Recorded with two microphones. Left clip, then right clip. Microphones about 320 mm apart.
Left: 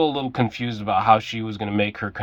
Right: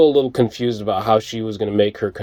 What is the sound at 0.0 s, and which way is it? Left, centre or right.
Speech, centre.